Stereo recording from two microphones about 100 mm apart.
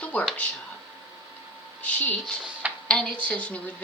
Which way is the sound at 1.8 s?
15° left (ahead or behind).